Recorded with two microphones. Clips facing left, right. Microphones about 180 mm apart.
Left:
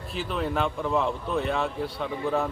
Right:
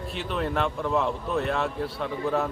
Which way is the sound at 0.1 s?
Centre (ahead or behind).